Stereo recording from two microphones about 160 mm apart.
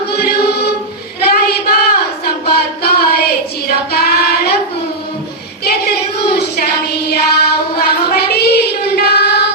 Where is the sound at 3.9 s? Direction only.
85° left.